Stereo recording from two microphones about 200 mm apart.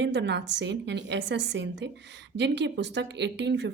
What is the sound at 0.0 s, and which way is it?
A woman's voice, 60° right (ahead or behind).